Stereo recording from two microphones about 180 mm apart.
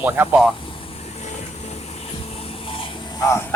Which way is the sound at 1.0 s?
35° left (ahead or behind).